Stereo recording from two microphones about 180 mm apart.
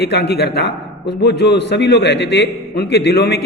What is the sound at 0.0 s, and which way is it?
A man's voice, 65° left (ahead or behind).